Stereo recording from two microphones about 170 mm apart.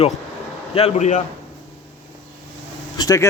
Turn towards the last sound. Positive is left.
turn(degrees=20)  # may be behind; listen again after turning